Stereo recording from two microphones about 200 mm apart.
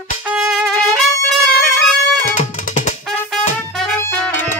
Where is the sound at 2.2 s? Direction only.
40° left (ahead or behind).